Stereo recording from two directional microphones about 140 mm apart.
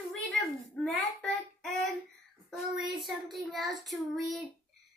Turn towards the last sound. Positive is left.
turn(degrees=0)  # may be behind; listen again after turning